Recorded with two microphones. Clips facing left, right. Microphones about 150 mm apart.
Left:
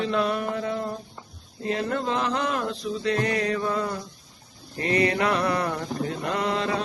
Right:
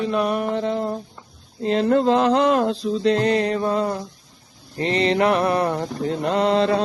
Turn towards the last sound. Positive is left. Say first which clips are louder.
# right 8 dB
turn(degrees=-35)  # may be behind; listen again after turning